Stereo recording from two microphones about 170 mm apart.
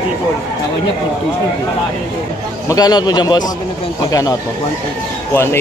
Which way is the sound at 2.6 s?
20° left (ahead or behind).